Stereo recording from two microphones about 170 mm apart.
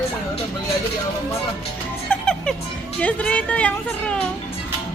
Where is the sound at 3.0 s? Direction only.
10° left (ahead or behind).